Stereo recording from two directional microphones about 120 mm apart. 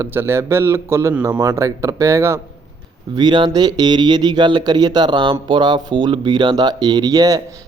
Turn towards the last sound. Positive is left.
turn(degrees=-30)  # may be behind; listen again after turning